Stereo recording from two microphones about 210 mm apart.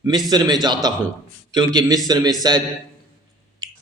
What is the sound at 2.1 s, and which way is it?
Speech, 20° right (ahead or behind).